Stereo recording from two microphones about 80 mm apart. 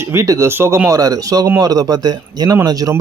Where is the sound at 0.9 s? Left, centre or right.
Right.